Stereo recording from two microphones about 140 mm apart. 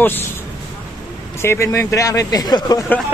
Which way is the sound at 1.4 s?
20° left (ahead or behind).